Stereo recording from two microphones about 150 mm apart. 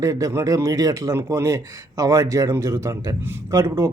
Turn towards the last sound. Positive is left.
turn(degrees=-20)  # may be behind; listen again after turning